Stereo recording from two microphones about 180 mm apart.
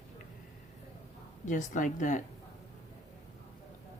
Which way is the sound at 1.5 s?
45° left (ahead or behind).